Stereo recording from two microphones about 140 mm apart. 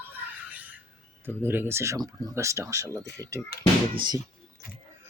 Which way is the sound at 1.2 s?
15° right (ahead or behind).